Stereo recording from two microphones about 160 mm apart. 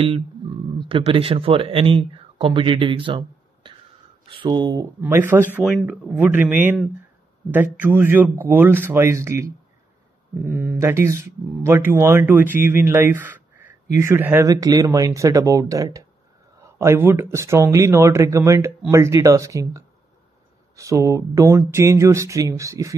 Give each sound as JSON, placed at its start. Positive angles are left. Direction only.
{"t": 0.7, "sound": "speech", "side_deg": -35}
{"t": 5.0, "sound": "speech", "side_deg": -15}
{"t": 5.7, "sound": "speech", "side_deg": 0}
{"t": 6.1, "sound": "speech", "side_deg": -10}